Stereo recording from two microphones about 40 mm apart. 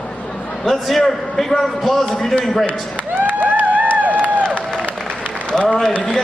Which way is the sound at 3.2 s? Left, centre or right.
Right.